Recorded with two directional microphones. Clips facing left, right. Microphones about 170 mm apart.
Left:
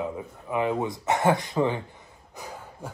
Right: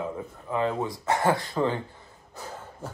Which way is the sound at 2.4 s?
15° left (ahead or behind).